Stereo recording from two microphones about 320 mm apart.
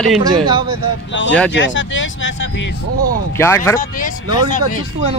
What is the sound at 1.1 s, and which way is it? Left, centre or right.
Speech, left.